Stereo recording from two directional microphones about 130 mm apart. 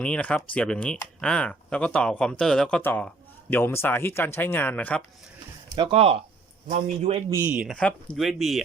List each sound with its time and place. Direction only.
0.0 s speech: 10° left (ahead or behind)
5.7 s a man's voice: 40° right (ahead or behind)
7.3 s speech: 20° right (ahead or behind)
7.5 s speech: 5° right (ahead or behind)
7.8 s speech: 10° left (ahead or behind)
8.1 s speech: centre (ahead or behind)